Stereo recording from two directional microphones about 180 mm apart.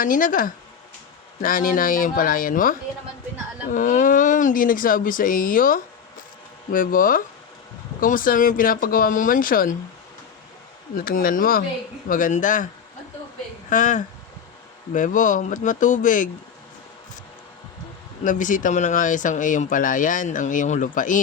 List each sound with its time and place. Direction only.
0.0 s speech: 50° left (ahead or behind)
10.9 s speech: 50° left (ahead or behind)
13.7 s speech: 45° left (ahead or behind)
18.2 s speech: 45° left (ahead or behind)